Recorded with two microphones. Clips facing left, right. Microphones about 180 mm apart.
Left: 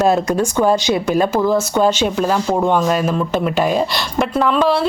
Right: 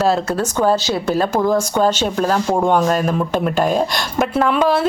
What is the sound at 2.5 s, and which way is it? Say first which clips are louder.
Speech: right 1 dB; 10° right (ahead or behind).